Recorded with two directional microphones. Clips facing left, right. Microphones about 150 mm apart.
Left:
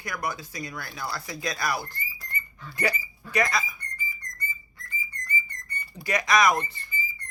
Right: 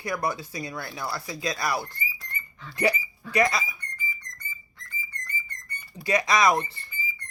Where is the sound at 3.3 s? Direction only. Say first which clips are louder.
Right 3 dB; 25° right (ahead or behind).